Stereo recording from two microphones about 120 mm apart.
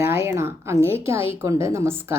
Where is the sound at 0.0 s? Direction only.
20° right (ahead or behind).